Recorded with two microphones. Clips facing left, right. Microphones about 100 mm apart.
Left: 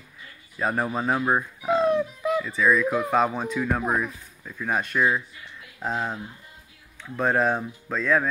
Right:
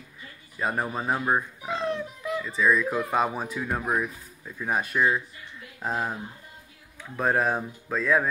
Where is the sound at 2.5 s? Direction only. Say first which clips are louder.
Even; centre (ahead or behind); by 4.7 s 15° right (ahead or behind).